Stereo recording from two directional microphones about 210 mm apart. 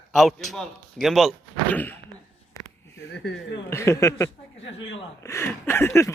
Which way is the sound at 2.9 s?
55° left (ahead or behind).